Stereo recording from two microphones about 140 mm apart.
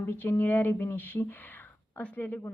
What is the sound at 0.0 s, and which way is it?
A woman's voice, 15° left (ahead or behind).